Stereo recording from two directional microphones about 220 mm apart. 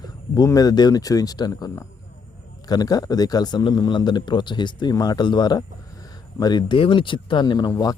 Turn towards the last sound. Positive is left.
turn(degrees=15)  # may be behind; listen again after turning